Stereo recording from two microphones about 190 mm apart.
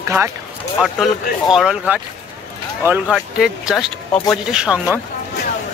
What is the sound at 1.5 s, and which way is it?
Speech, 5° right (ahead or behind).